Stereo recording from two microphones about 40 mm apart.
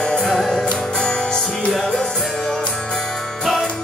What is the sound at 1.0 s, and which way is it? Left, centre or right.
Music, left.